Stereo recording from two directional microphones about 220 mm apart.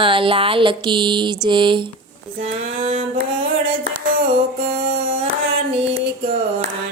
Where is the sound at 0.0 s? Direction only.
25° right (ahead or behind).